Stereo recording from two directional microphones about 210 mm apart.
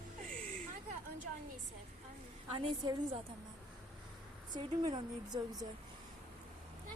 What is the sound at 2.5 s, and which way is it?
Speech, 25° right (ahead or behind).